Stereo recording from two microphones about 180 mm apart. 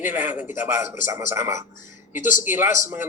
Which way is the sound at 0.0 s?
10° right (ahead or behind).